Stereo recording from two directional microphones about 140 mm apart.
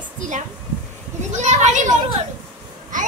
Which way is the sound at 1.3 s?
55° right (ahead or behind).